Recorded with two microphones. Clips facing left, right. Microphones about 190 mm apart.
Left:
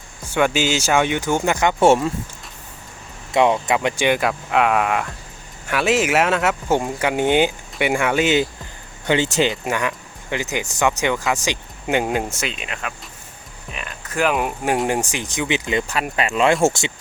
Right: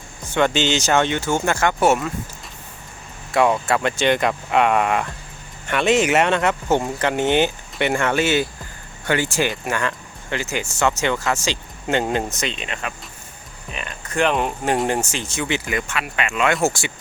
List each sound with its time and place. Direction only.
0.3 s speech: 10° left (ahead or behind); by 2.1 s 30° left (ahead or behind)
3.3 s speech: 20° left (ahead or behind)
15.9 s speech: 35° left (ahead or behind)